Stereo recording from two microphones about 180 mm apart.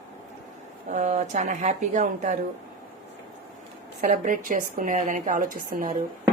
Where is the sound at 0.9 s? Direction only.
40° right (ahead or behind).